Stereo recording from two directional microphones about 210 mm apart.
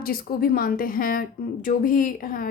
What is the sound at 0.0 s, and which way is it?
A woman's voice, 45° left (ahead or behind).